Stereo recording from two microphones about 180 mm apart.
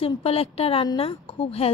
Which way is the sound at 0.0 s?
35° left (ahead or behind).